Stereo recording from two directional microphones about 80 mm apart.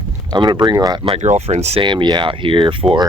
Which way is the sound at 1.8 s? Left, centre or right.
Right.